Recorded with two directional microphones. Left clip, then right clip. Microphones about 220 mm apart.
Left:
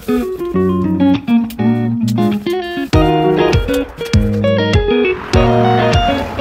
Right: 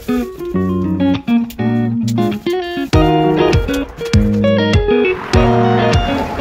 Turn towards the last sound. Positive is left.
turn(degrees=0)  # may be behind; listen again after turning